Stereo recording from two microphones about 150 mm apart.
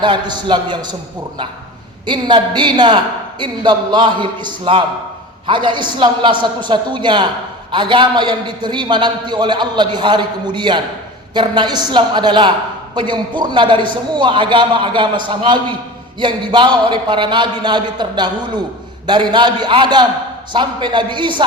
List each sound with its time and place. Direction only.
0.0 s a man's voice: 30° right (ahead or behind)
2.0 s a woman's voice: 30° right (ahead or behind)